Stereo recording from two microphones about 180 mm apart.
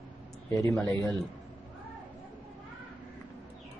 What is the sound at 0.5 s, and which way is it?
Speech, 15° left (ahead or behind).